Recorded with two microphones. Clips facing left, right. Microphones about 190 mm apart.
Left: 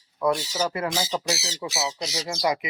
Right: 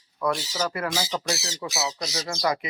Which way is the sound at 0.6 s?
20° left (ahead or behind).